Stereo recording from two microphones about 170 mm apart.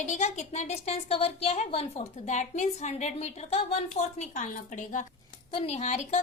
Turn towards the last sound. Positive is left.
turn(degrees=45)  # may be behind; listen again after turning